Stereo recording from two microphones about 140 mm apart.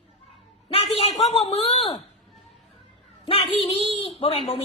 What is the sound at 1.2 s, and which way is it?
Speech, 40° left (ahead or behind).